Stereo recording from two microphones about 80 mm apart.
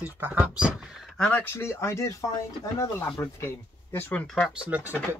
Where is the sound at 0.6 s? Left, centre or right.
Centre.